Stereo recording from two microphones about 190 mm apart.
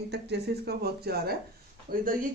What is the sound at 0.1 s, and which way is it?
Speech, 60° right (ahead or behind).